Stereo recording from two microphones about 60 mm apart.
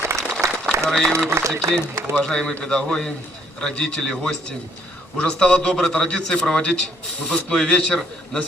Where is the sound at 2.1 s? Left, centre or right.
Centre.